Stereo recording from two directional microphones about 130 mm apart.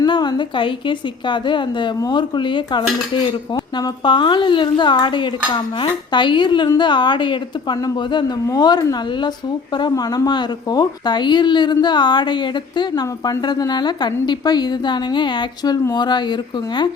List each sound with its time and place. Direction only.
0.0 s a woman's voice: 35° left (ahead or behind)